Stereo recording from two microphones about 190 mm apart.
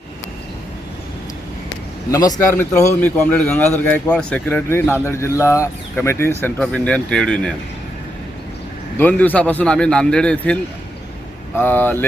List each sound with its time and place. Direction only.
2.0 s a man's voice: 20° left (ahead or behind)
9.0 s speech: 10° left (ahead or behind)